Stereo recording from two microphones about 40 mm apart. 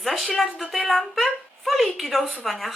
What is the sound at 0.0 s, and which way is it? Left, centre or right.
Speech, centre.